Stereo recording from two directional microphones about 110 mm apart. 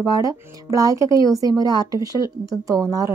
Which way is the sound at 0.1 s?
30° right (ahead or behind).